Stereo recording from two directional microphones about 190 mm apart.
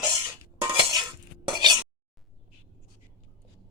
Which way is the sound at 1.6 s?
20° right (ahead or behind).